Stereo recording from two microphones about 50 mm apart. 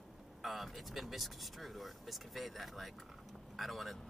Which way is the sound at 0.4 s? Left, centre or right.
Centre.